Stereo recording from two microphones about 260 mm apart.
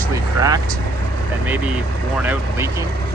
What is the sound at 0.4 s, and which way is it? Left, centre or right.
Speech, centre.